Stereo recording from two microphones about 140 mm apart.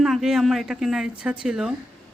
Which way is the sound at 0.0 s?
Centre (ahead or behind).